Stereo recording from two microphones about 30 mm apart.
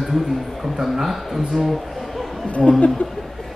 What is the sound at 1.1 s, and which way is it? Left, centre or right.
Speech, centre.